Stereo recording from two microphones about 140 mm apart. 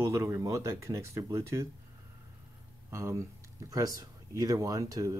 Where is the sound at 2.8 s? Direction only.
20° right (ahead or behind).